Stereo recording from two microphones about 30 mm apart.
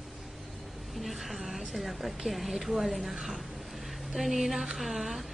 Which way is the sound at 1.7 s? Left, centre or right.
Centre.